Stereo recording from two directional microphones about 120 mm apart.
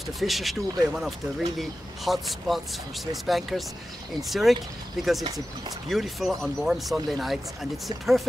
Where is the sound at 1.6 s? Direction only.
Centre (ahead or behind).